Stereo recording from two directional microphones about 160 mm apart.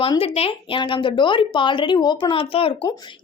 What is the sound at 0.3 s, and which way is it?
Speech, 35° left (ahead or behind).